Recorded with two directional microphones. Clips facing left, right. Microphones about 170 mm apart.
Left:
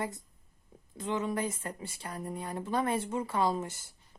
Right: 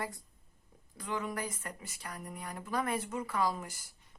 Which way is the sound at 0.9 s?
25° left (ahead or behind).